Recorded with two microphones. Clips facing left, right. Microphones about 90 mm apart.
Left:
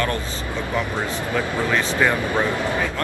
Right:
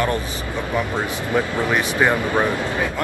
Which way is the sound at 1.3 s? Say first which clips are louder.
Right 2 dB; 20° right (ahead or behind).